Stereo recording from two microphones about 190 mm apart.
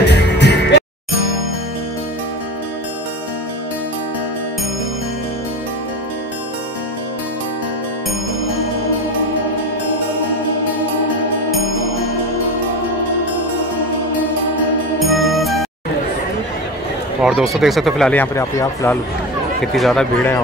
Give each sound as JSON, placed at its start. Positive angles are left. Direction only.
{"t": 0.0, "sound": "music", "side_deg": 60}
{"t": 15.0, "sound": "music", "side_deg": 0}
{"t": 17.2, "sound": "speech", "side_deg": 0}
{"t": 19.6, "sound": "speech", "side_deg": 0}